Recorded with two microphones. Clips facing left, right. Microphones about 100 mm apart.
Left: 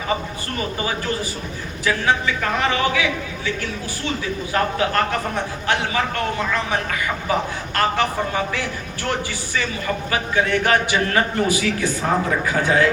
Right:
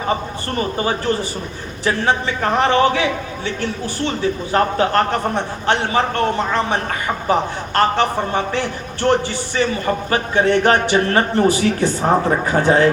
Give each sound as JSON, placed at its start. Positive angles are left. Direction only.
{"t": 0.5, "sound": "a man's voice", "side_deg": -40}